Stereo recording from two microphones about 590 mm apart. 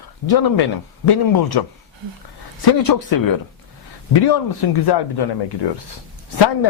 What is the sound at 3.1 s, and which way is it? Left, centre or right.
Speech, left.